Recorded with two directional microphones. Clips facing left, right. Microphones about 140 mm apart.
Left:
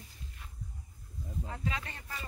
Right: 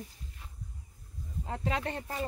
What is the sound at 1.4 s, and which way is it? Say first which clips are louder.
Speech: right 7 dB; 55° right (ahead or behind).